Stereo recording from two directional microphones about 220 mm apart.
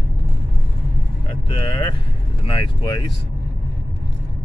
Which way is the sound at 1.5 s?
20° left (ahead or behind).